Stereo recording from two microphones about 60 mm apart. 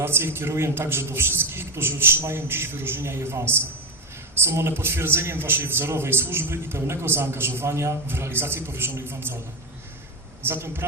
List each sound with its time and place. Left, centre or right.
0.0 s a man's voice: right
10.4 s a man's voice: right